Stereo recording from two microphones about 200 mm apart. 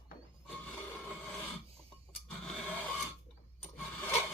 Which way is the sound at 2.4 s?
5° left (ahead or behind).